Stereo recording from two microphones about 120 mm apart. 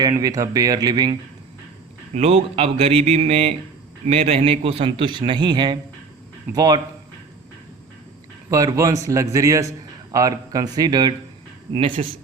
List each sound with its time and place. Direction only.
0.0 s speech: 30° right (ahead or behind)
2.1 s speech: 60° right (ahead or behind); by 6.8 s 35° right (ahead or behind)
8.4 s a man's voice: 25° right (ahead or behind)
11.7 s speech: 50° right (ahead or behind)